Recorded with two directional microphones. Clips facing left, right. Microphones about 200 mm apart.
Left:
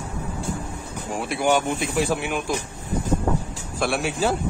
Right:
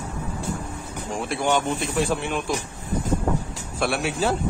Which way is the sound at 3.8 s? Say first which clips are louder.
Left 1 dB; centre (ahead or behind).